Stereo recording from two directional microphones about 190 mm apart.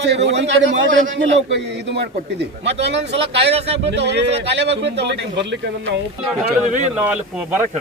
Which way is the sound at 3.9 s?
65° right (ahead or behind).